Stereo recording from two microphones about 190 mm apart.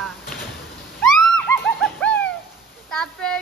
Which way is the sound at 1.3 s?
5° left (ahead or behind).